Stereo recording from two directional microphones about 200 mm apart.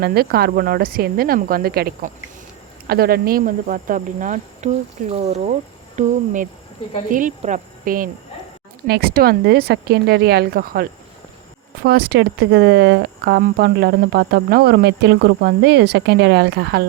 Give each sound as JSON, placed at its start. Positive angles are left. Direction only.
{"t": 0.0, "sound": "speech", "side_deg": -50}